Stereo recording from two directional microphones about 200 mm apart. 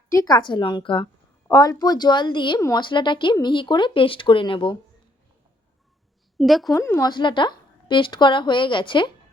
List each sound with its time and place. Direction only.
0.1 s a woman's voice: 20° left (ahead or behind)
6.4 s a woman's voice: centre (ahead or behind)
6.7 s a woman's voice: 15° left (ahead or behind)